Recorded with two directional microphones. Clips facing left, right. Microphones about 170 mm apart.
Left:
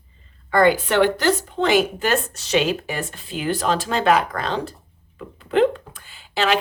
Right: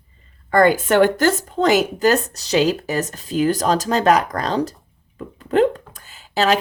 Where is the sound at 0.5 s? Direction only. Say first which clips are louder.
Right 2 dB; 45° right (ahead or behind).